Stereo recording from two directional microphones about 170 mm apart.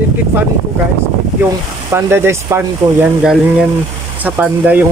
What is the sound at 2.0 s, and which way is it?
Speech, 15° right (ahead or behind).